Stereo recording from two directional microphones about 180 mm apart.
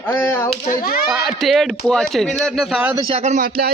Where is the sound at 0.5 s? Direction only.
35° left (ahead or behind).